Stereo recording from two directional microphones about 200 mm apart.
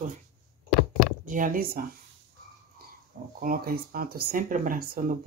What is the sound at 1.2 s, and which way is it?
Speech, 40° right (ahead or behind).